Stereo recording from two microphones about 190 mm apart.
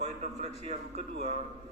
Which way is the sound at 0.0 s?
35° right (ahead or behind).